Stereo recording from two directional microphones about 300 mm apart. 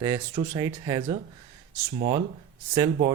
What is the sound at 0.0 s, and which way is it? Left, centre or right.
Speech, centre.